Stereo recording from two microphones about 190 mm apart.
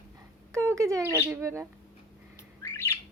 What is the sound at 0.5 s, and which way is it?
Speech, 15° right (ahead or behind).